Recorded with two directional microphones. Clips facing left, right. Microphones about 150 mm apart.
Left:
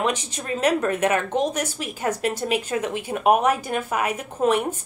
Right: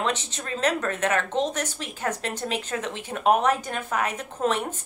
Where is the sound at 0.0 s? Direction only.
10° left (ahead or behind).